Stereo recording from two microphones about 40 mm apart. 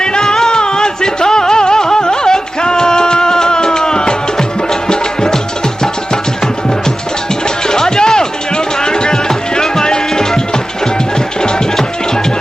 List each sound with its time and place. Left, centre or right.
0.0 s music: centre
7.4 s music: centre